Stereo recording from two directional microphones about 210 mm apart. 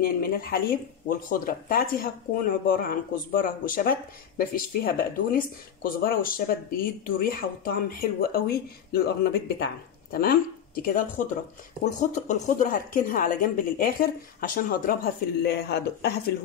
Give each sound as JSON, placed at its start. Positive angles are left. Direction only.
{"t": 0.0, "sound": "a woman's voice", "side_deg": 45}
{"t": 15.4, "sound": "speech", "side_deg": 50}